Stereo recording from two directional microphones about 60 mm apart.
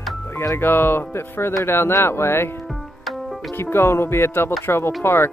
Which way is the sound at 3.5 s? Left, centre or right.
Left.